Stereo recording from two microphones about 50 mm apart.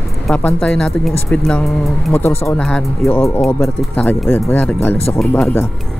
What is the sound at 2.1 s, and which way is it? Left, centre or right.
Speech, left.